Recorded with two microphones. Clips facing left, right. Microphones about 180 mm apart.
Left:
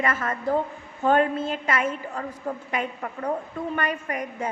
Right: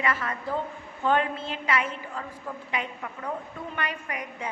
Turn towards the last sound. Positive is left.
turn(degrees=45)  # may be behind; listen again after turning